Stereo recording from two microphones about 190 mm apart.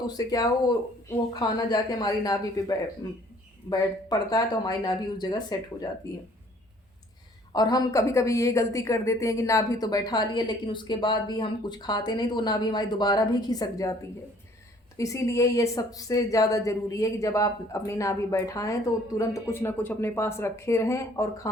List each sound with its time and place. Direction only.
0.1 s a woman's voice: 20° left (ahead or behind)
7.5 s a woman's voice: 20° left (ahead or behind)
14.9 s speech: 15° left (ahead or behind)